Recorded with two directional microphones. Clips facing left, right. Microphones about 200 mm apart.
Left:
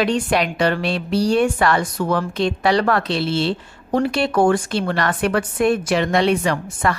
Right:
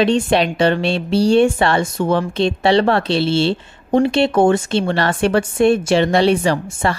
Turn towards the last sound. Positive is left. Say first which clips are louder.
# right 3 dB
turn(degrees=-30)  # may be behind; listen again after turning